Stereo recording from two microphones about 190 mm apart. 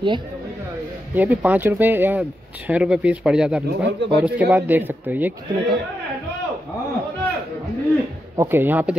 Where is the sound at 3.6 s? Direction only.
70° right (ahead or behind).